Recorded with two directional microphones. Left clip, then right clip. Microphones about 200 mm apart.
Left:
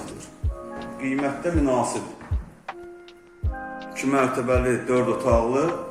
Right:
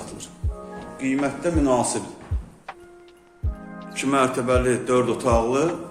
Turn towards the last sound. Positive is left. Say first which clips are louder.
# even
turn(degrees=-10)  # may be behind; listen again after turning